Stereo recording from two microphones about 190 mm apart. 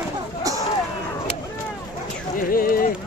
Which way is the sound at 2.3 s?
50° left (ahead or behind).